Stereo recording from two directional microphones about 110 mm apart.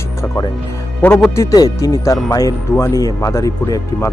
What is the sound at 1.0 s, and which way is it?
Speech, 15° left (ahead or behind).